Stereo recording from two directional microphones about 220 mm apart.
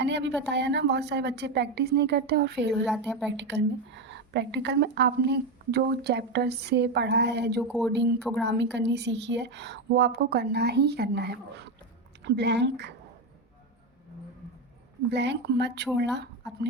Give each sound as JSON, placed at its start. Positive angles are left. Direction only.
{"t": 0.0, "sound": "a woman's voice", "side_deg": -50}
{"t": 2.8, "sound": "a woman's voice", "side_deg": 0}
{"t": 3.3, "sound": "a woman's voice", "side_deg": -50}
{"t": 15.1, "sound": "a woman's voice", "side_deg": -50}